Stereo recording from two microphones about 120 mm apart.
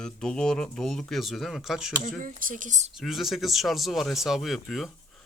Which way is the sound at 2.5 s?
90° right.